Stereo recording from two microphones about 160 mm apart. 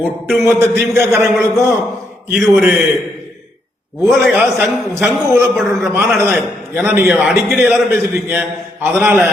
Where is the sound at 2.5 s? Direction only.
10° right (ahead or behind).